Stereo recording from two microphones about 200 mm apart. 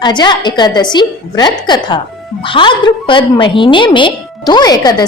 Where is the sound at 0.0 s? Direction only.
20° left (ahead or behind).